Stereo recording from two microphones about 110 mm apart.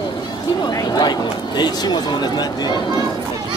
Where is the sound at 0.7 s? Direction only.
35° left (ahead or behind).